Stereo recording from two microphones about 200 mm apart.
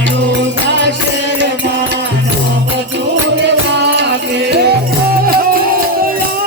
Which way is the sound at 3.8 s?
60° right (ahead or behind).